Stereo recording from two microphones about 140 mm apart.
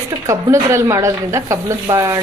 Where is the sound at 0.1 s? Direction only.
25° right (ahead or behind).